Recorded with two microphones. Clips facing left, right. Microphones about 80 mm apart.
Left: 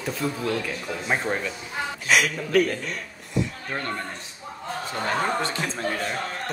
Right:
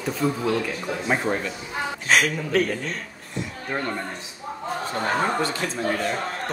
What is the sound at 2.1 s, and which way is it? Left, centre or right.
Speech, right.